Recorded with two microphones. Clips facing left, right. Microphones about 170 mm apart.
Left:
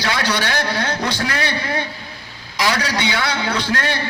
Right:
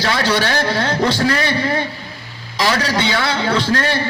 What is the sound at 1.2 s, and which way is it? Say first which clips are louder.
Speech: right 6 dB; 35° right (ahead or behind).